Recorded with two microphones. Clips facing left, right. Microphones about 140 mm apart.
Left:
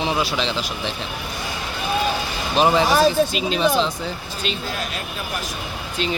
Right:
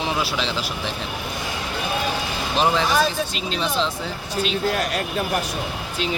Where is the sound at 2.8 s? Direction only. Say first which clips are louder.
Left 4 dB; 40° left (ahead or behind).